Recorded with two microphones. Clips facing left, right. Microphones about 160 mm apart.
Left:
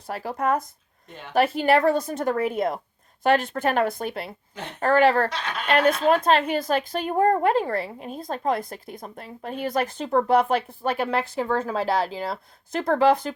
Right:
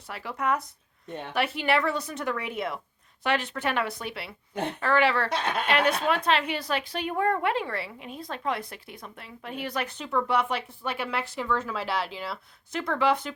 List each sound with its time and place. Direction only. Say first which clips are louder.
0.1 s a woman's voice: left 4 dB; 40° left (ahead or behind)
5.3 s speech: right 3 dB; 55° right (ahead or behind)
5.6 s a woman's voice: left 7 dB; 45° left (ahead or behind)